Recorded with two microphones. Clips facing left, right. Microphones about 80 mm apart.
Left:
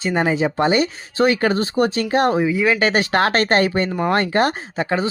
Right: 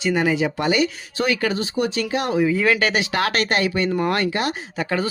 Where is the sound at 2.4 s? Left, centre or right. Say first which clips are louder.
Left 1 dB; centre.